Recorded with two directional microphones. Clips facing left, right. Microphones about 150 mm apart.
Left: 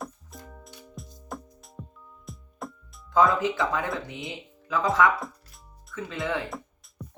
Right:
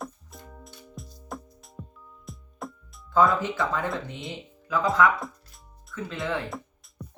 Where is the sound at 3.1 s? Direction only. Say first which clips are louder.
Even; 20° left (ahead or behind).